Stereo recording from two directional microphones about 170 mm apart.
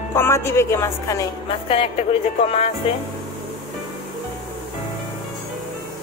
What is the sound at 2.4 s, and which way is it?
Music, 35° left (ahead or behind).